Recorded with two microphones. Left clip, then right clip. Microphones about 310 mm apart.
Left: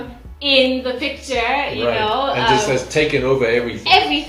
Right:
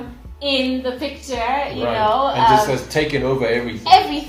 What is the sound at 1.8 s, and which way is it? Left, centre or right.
A woman's voice, right.